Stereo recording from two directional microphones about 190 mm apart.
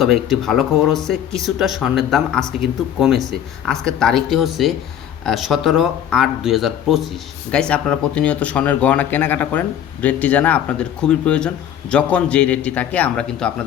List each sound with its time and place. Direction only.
0.0 s speech: centre (ahead or behind)